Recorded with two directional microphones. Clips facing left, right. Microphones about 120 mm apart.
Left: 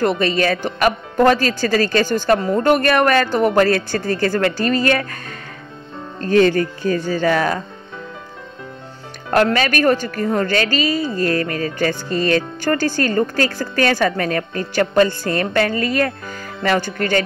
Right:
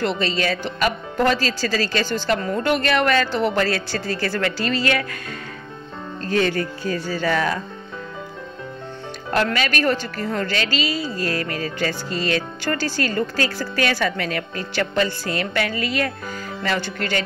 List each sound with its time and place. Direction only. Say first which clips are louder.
0.0 s a woman's voice: left 5 dB; 50° left (ahead or behind)
2.4 s a woman's voice: left 6 dB; 35° left (ahead or behind)
2.7 s a woman's voice: left 4 dB; 50° left (ahead or behind)
6.2 s a woman's voice: left 7 dB; 45° left (ahead or behind)
9.3 s a woman's voice: left 5 dB; 45° left (ahead or behind)